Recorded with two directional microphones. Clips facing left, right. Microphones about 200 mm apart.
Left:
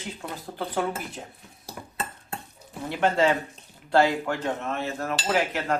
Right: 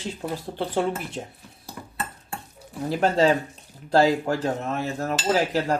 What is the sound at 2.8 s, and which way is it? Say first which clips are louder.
Dishes: right 3 dB; 35° right (ahead or behind).